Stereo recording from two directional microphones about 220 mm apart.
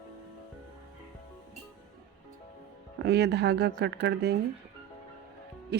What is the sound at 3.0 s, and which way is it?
A woman's voice, 50° right (ahead or behind).